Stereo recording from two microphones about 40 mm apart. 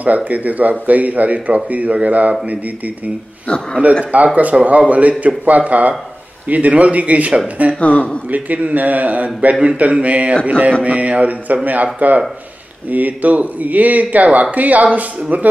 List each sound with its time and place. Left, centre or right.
0.0 s speech: right
4.0 s speech: right
7.8 s speech: left
8.3 s speech: right